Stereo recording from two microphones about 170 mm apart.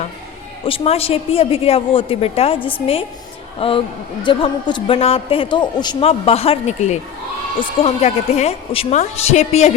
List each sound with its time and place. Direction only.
0.6 s a man's voice: 35° left (ahead or behind)
3.6 s a man's voice: 30° left (ahead or behind)